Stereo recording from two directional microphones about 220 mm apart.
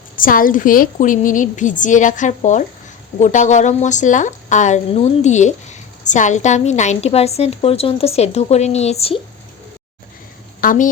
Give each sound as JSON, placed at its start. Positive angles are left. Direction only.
{"t": 0.2, "sound": "a woman's voice", "side_deg": 40}
{"t": 10.6, "sound": "speech", "side_deg": 40}